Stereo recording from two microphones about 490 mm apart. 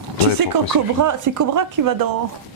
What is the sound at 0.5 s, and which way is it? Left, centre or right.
Speech, right.